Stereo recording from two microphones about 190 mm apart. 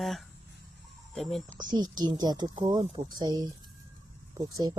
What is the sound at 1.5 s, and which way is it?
A woman's voice, 20° right (ahead or behind).